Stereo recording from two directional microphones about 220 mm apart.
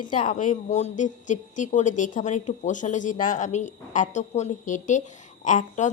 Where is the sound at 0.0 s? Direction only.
20° left (ahead or behind).